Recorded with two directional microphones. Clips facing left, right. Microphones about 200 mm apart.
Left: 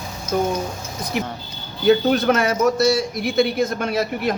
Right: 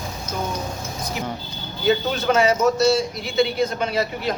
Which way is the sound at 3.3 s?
50° left (ahead or behind).